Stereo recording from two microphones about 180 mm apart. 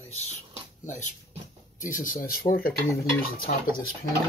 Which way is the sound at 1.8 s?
50° left (ahead or behind).